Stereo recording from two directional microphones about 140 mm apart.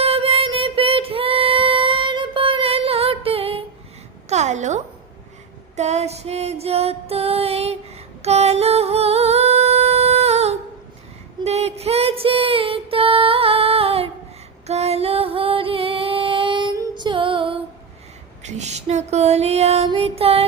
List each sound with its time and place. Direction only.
0.0 s female singing: 45° right (ahead or behind)
4.3 s a sound: 55° right (ahead or behind)
5.7 s music: 55° right (ahead or behind)
8.2 s singing: 50° right (ahead or behind)
11.4 s music: 50° right (ahead or behind)
18.4 s a sound: 55° right (ahead or behind)
20.0 s music: 45° right (ahead or behind)